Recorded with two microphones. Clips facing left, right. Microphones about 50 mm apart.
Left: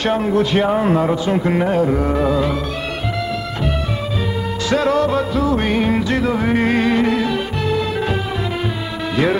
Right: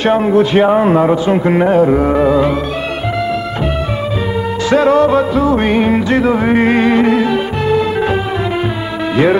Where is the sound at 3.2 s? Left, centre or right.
Right.